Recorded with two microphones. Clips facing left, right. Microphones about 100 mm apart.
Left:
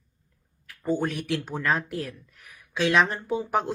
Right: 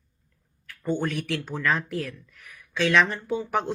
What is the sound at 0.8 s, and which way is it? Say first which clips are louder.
Speech: left 1 dB; 5° left (ahead or behind).